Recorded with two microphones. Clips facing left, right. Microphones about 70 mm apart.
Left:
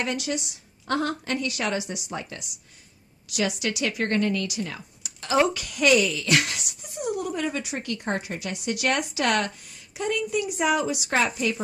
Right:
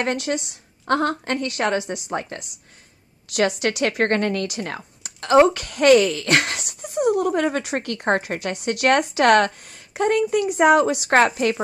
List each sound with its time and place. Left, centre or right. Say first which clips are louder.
0.0 s a woman's voice: right 5 dB; right